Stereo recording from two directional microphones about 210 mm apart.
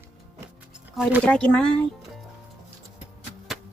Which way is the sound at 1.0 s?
Centre (ahead or behind).